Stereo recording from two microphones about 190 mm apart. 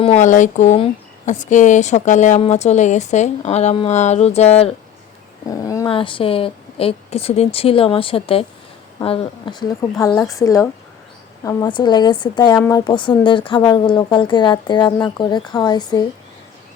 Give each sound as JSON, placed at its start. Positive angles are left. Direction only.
{"t": 0.0, "sound": "speech", "side_deg": 35}
{"t": 5.5, "sound": "dog", "side_deg": 15}
{"t": 5.9, "sound": "speech", "side_deg": 25}
{"t": 10.1, "sound": "a woman's voice", "side_deg": 5}
{"t": 10.3, "sound": "speech", "side_deg": 15}